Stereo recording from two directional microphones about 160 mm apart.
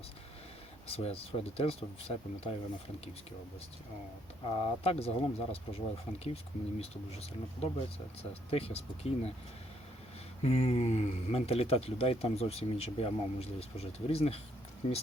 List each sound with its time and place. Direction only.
0.9 s speech: 40° left (ahead or behind)
4.4 s speech: 35° left (ahead or behind)
10.4 s speech: 40° left (ahead or behind)